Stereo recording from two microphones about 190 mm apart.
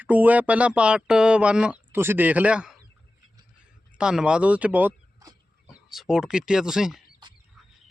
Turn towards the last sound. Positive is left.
turn(degrees=0)  # may be behind; listen again after turning